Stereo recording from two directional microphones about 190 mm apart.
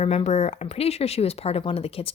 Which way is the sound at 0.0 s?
35° left (ahead or behind).